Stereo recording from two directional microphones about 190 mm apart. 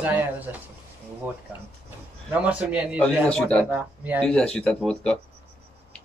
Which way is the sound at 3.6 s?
10° right (ahead or behind).